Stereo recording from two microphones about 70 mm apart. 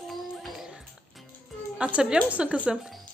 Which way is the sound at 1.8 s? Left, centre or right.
Centre.